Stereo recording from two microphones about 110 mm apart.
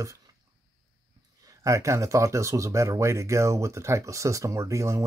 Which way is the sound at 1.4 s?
30° right (ahead or behind).